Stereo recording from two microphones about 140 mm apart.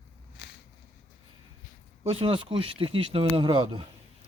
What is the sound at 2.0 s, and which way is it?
Speech, 45° right (ahead or behind).